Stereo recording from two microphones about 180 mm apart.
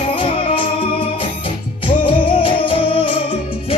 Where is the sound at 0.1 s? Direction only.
30° left (ahead or behind).